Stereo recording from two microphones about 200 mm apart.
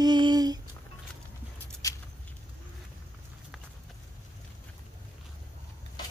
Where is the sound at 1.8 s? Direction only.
15° left (ahead or behind).